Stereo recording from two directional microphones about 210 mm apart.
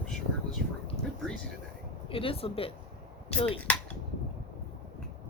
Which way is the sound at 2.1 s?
25° left (ahead or behind).